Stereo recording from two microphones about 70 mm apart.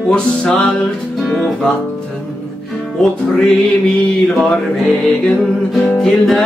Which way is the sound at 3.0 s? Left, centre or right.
Centre.